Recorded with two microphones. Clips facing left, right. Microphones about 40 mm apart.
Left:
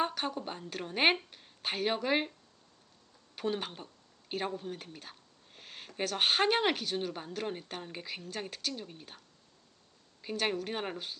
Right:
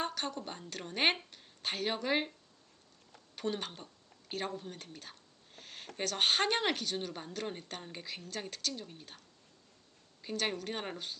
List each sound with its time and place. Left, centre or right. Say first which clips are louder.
0.0 s a woman's voice: left 4 dB; centre
3.3 s speech: left 2 dB; centre
5.5 s a sound: left 1 dB; centre
6.0 s speech: left 2 dB; centre